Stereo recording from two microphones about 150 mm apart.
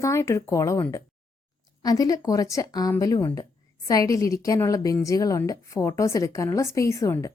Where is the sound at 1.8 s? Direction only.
25° left (ahead or behind).